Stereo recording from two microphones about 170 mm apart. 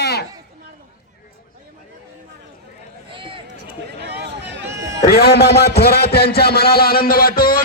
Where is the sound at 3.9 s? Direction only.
80° right.